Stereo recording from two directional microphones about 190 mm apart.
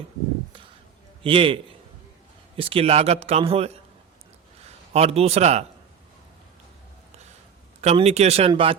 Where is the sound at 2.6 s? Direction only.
30° right (ahead or behind).